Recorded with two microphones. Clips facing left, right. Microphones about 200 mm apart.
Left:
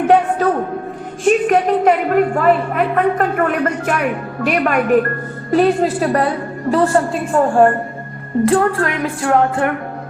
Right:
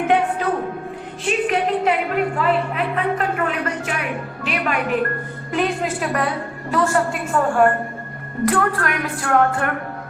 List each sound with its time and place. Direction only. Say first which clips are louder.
1.2 s a woman's voice: left 7 dB; 45° left (ahead or behind)
5.5 s a woman's voice: left 8 dB; 35° left (ahead or behind)